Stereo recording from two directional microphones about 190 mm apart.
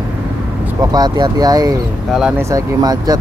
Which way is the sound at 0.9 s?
20° right (ahead or behind).